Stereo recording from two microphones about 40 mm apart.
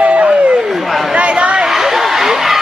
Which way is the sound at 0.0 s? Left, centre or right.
Right.